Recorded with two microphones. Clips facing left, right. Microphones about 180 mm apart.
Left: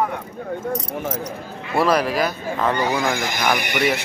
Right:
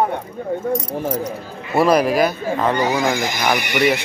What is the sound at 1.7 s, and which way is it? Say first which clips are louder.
Speech: right 4 dB; 15° right (ahead or behind).